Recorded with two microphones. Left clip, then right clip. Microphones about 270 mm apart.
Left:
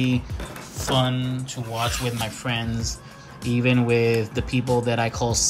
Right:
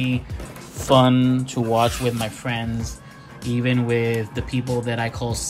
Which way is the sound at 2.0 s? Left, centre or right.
Centre.